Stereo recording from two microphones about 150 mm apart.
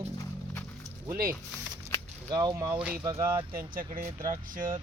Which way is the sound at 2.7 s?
10° right (ahead or behind).